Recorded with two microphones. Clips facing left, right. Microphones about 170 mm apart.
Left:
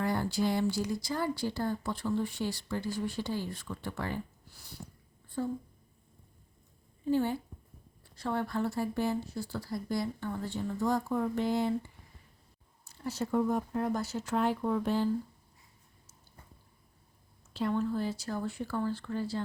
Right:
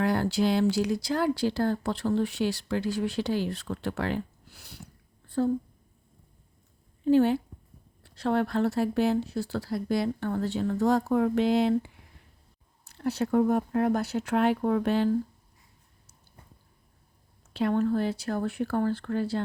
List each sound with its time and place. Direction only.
0.0 s speech: 80° right
7.0 s a woman's voice: 80° right
12.8 s speech: 65° right (ahead or behind)
17.5 s speech: 65° right (ahead or behind)